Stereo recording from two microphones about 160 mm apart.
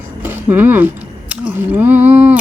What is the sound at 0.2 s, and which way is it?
Speech, 10° right (ahead or behind).